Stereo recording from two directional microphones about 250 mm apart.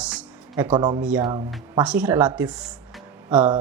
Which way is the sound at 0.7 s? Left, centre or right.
Centre.